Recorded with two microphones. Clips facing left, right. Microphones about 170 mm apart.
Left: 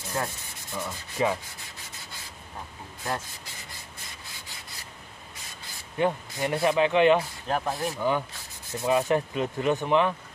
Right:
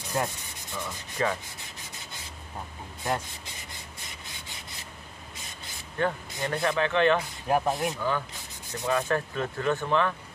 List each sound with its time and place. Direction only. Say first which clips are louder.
0.2 s speech: right 2 dB; 20° right (ahead or behind)
0.7 s speech: left 2 dB; 5° left (ahead or behind)
3.0 s speech: right 2 dB; 20° right (ahead or behind)
5.9 s speech: left 3 dB; 15° left (ahead or behind)
7.4 s speech: right 3 dB; 15° right (ahead or behind)
8.8 s speech: left 3 dB; 20° left (ahead or behind)